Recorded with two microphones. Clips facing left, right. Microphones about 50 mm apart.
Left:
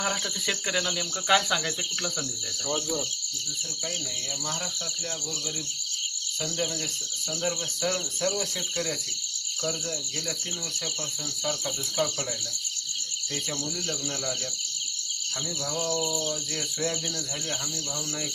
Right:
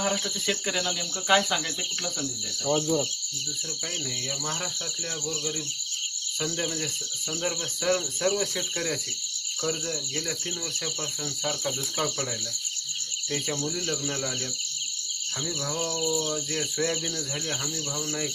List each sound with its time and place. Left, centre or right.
0.0 s speech: centre
7.4 s cricket: centre
11.4 s cricket: centre
13.3 s cricket: centre
15.6 s cricket: centre